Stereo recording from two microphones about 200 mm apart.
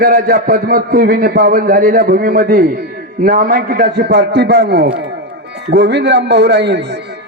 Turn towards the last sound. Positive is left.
turn(degrees=-60)  # may be behind; listen again after turning